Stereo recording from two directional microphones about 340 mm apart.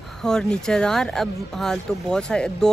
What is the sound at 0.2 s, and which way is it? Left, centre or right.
Speech, centre.